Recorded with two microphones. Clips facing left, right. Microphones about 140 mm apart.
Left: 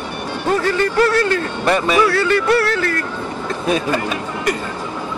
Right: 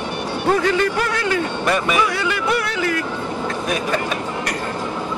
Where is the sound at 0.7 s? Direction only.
15° right (ahead or behind).